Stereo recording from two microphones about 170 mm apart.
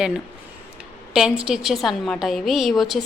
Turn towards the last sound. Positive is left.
turn(degrees=0)  # may be behind; listen again after turning